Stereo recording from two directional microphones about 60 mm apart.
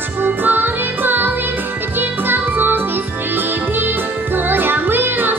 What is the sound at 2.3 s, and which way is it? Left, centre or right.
Music, right.